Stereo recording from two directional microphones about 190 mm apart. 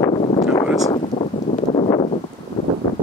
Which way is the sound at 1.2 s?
35° left (ahead or behind).